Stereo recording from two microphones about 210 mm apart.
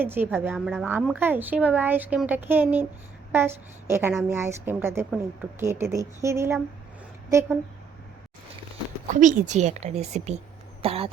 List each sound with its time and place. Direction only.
0.0 s a woman's voice: 10° right (ahead or behind)
9.2 s a woman's voice: 35° right (ahead or behind)
10.8 s throat clearing: 25° right (ahead or behind)